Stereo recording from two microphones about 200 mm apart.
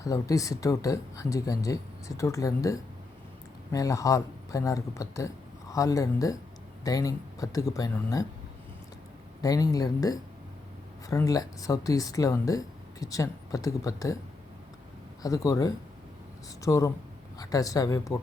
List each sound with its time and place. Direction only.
0.0 s speech: 15° left (ahead or behind)
9.4 s speech: 20° left (ahead or behind)
15.2 s speech: 15° left (ahead or behind)